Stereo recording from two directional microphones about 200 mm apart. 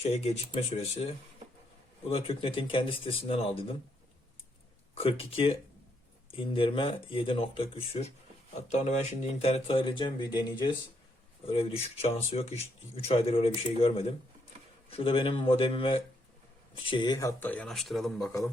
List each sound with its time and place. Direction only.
0.0 s speech: 30° left (ahead or behind)
6.3 s speech: 25° left (ahead or behind); by 18.3 s centre (ahead or behind)